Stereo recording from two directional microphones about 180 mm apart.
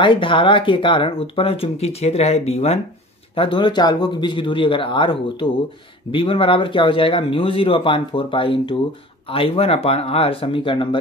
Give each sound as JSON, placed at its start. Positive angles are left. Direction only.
{"t": 0.0, "sound": "speech", "side_deg": 25}